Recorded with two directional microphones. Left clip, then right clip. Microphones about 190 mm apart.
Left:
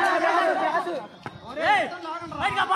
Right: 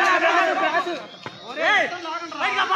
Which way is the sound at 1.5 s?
35° left (ahead or behind).